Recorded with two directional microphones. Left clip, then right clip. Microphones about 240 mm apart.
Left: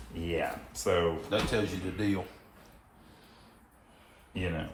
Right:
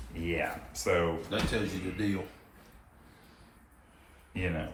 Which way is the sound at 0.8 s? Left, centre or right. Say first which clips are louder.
Even; centre.